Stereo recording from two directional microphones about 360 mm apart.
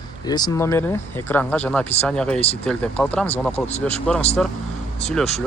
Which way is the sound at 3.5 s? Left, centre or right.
Centre.